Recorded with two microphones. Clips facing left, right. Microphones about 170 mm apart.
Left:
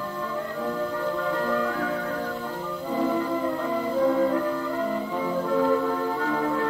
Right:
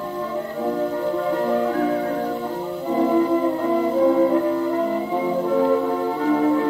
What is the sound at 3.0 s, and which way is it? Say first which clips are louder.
Music: right 7 dB; 50° right (ahead or behind).